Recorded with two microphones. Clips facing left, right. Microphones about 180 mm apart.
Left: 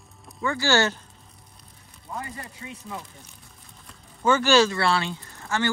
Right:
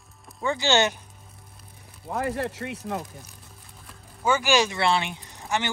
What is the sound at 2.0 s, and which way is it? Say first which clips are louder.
Speech: right 9 dB; 75° right (ahead or behind).